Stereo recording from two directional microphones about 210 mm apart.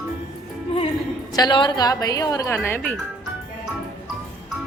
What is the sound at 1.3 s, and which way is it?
A woman's voice, 20° left (ahead or behind).